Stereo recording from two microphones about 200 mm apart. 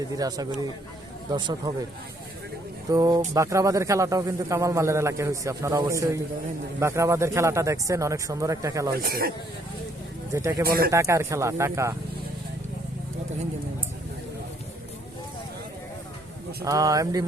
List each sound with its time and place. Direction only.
0.2 s speech: 20° right (ahead or behind)
2.9 s a man's voice: 20° right (ahead or behind)
9.0 s speech: 50° right (ahead or behind)
10.7 s speech: 50° right (ahead or behind)
10.9 s a man's voice: 15° right (ahead or behind)
16.6 s a man's voice: 15° right (ahead or behind)